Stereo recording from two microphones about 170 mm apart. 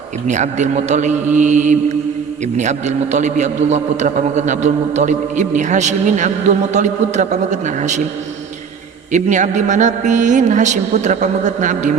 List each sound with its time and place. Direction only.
0.3 s a man's voice: 45° right (ahead or behind)
9.1 s a man's voice: 45° right (ahead or behind)